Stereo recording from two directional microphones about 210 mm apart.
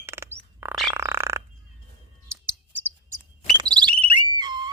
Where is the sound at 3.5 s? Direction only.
20° right (ahead or behind).